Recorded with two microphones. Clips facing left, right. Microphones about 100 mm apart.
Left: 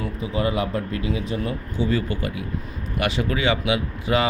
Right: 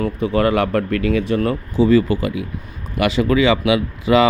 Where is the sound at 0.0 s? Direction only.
60° right (ahead or behind).